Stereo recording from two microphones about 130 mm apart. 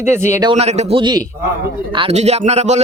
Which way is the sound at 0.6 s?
55° right (ahead or behind).